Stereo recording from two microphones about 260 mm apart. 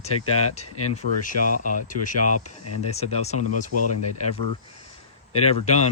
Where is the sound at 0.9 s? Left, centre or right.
Left.